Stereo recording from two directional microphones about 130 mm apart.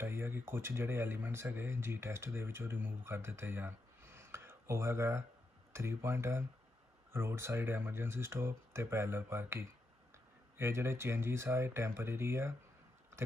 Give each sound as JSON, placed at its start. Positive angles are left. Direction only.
{"t": 0.0, "sound": "speech", "side_deg": -15}